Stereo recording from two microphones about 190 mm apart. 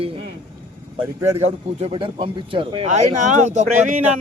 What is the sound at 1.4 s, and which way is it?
Speech, 30° right (ahead or behind).